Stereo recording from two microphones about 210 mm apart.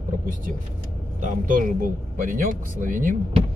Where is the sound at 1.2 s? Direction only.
40° right (ahead or behind).